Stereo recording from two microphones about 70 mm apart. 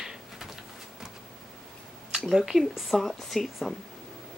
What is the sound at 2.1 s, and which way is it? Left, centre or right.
Speech, centre.